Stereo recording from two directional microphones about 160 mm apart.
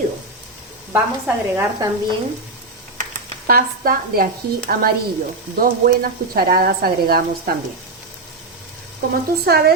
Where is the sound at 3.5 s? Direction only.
65° right (ahead or behind).